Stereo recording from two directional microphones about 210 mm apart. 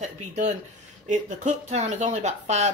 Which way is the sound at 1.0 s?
35° right (ahead or behind).